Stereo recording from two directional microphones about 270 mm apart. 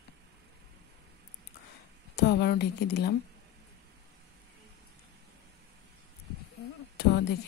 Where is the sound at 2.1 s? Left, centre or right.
Left.